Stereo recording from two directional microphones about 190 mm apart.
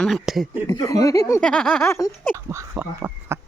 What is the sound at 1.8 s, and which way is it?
Speech, 15° left (ahead or behind).